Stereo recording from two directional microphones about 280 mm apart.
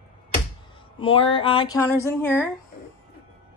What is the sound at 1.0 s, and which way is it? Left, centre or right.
Speech, centre.